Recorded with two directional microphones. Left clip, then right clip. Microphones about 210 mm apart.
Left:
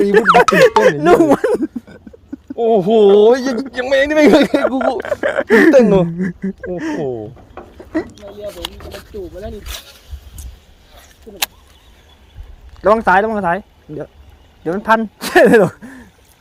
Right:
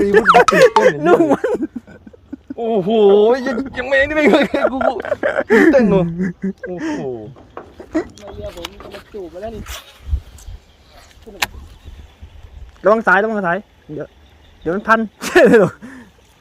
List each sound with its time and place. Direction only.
0.0 s speech: centre (ahead or behind)
0.9 s speech: 10° left (ahead or behind)
2.6 s speech: 45° left (ahead or behind)
4.8 s speech: centre (ahead or behind)
5.7 s speech: 50° left (ahead or behind)
6.1 s speech: centre (ahead or behind)
7.8 s a sound: 5° right (ahead or behind)
8.8 s a sound: 50° left (ahead or behind)
9.6 s speech: 15° left (ahead or behind)
12.8 s speech: centre (ahead or behind)